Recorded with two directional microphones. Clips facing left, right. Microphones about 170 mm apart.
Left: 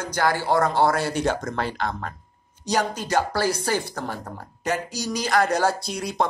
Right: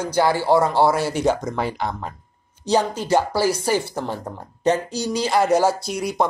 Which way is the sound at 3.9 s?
15° right (ahead or behind).